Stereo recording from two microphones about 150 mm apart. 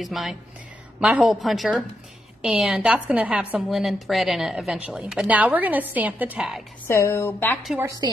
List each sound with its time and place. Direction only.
0.0 s a woman's voice: centre (ahead or behind)
6.9 s a woman's voice: 20° left (ahead or behind)
8.0 s a woman's voice: 25° right (ahead or behind)